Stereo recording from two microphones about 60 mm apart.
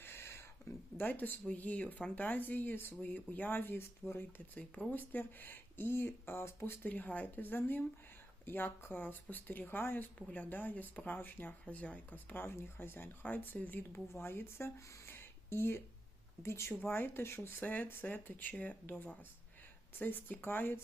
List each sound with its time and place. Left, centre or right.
0.0 s a sound: left
0.9 s speech: left
6.8 s speech: left
12.3 s speech: left
14.1 s speech: left